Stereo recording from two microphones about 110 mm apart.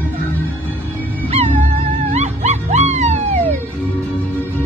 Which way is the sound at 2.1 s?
90° right.